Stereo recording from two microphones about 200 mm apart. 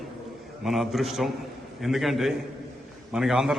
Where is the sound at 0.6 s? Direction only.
Centre (ahead or behind).